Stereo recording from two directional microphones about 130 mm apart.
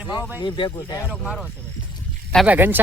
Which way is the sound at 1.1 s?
Centre (ahead or behind).